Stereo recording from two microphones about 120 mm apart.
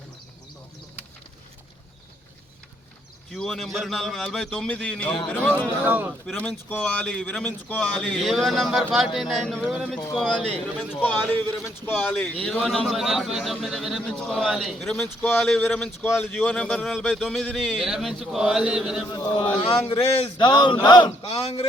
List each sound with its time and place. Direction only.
3.3 s speech: 5° left (ahead or behind)
5.8 s a man's voice: 15° right (ahead or behind)
6.3 s speech: 10° left (ahead or behind)
16.0 s speech: 15° left (ahead or behind); by 19.0 s 5° right (ahead or behind)
19.1 s a man's voice: 35° left (ahead or behind); by 20.3 s 55° left (ahead or behind)
20.4 s a man's voice: 40° left (ahead or behind); by 21.7 s 60° left (ahead or behind)